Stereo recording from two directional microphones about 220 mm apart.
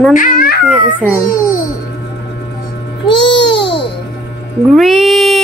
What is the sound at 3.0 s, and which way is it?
Babbling, 20° left (ahead or behind).